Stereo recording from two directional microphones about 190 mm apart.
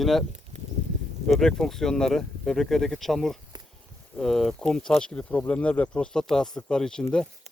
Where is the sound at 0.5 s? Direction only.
40° right (ahead or behind).